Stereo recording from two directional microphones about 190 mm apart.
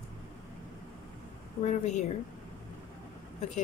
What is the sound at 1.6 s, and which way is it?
Speech, 40° left (ahead or behind).